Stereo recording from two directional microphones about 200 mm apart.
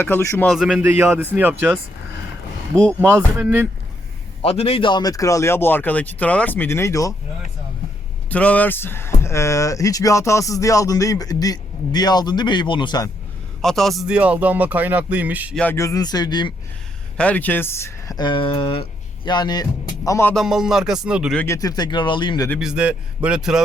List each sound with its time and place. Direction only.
0.0 s speech: 15° left (ahead or behind)
0.4 s speech: centre (ahead or behind)
3.0 s speech: 10° right (ahead or behind)
4.4 s speech: 30° left (ahead or behind)
8.3 s speech: 5° left (ahead or behind)
13.6 s speech: centre (ahead or behind)
15.5 s speech: 10° left (ahead or behind)
17.2 s speech: 5° left (ahead or behind)
20.3 s music: centre (ahead or behind)
21.3 s speech: 15° left (ahead or behind)
22.6 s music: 5° right (ahead or behind)